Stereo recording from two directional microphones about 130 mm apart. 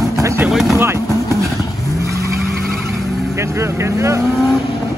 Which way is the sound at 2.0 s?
25° right (ahead or behind).